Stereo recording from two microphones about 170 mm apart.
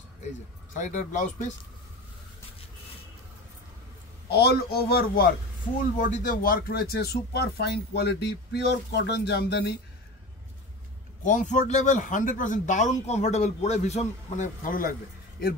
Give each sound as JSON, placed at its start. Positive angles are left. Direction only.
{"t": 0.7, "sound": "speech", "side_deg": 45}
{"t": 4.3, "sound": "a man's voice", "side_deg": 70}
{"t": 5.9, "sound": "speech", "side_deg": 50}
{"t": 11.2, "sound": "speech", "side_deg": 45}